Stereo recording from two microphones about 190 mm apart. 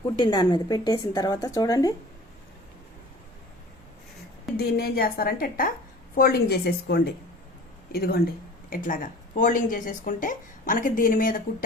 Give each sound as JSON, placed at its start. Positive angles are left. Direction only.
{"t": 0.2, "sound": "a woman's voice", "side_deg": 25}
{"t": 4.5, "sound": "a woman's voice", "side_deg": 55}